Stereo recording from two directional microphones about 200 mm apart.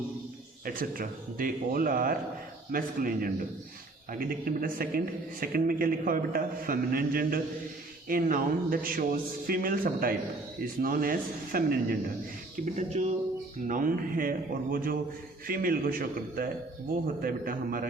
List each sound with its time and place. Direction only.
0.6 s a man's voice: 45° right (ahead or behind)
12.6 s a man's voice: 35° right (ahead or behind)